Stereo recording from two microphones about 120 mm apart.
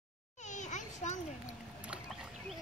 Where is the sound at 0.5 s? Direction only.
90° left.